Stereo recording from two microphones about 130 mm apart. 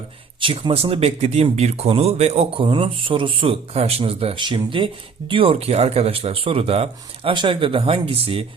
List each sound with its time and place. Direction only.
0.3 s speech: 40° right (ahead or behind)